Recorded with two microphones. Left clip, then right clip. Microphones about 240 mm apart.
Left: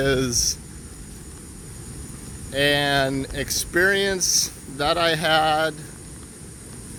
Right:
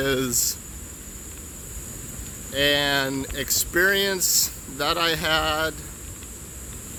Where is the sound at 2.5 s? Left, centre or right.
Centre.